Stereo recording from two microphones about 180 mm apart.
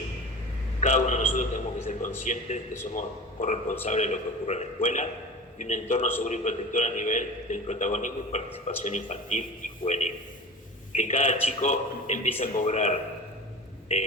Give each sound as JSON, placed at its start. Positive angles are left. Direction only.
{"t": 0.8, "sound": "a man's voice", "side_deg": 40}